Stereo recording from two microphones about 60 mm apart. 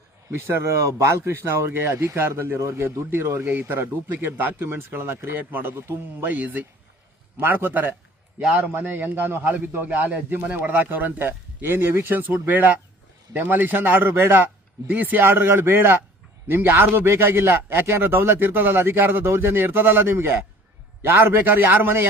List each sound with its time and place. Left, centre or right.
0.3 s a man's voice: right
5.4 s a man's voice: right
12.3 s a man's voice: right